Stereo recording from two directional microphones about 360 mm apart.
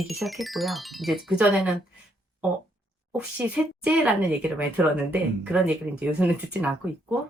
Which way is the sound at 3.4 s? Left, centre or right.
Centre.